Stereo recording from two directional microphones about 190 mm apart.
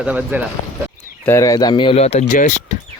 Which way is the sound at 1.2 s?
15° left (ahead or behind).